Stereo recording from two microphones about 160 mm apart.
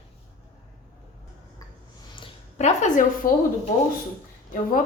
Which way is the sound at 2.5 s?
45° left (ahead or behind).